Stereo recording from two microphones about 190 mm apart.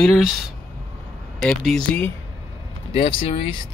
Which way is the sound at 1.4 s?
5° left (ahead or behind).